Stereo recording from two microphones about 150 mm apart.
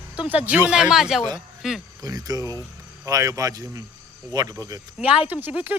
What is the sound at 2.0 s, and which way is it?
Speech, 25° right (ahead or behind).